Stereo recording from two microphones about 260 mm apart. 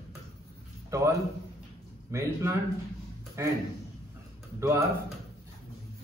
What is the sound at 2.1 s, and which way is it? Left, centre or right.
A man's voice, centre.